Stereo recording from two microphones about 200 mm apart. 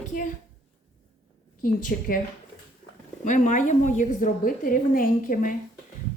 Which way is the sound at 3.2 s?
40° left (ahead or behind).